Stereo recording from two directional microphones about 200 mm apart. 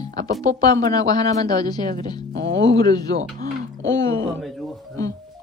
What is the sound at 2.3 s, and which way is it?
Music, 65° right (ahead or behind).